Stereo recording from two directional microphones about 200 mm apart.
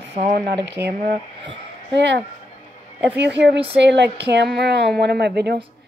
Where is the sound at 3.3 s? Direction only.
60° right (ahead or behind).